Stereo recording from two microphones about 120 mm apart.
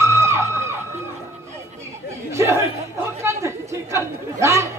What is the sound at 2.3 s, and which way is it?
Chatter, 25° right (ahead or behind).